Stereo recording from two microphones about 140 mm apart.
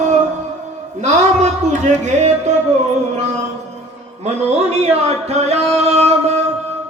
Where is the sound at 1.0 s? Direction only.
55° right (ahead or behind).